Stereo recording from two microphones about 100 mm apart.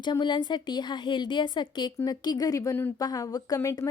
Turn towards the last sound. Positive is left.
turn(degrees=35)  # may be behind; listen again after turning